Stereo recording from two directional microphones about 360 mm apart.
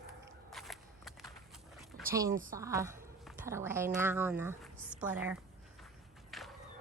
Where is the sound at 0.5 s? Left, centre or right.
Centre.